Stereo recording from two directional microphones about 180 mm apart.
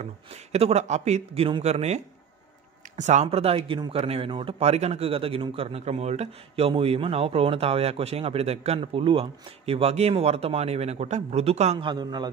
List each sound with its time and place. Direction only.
0.0 s a man's voice: 35° right (ahead or behind)
3.0 s a man's voice: 40° right (ahead or behind)
11.9 s a man's voice: 25° right (ahead or behind)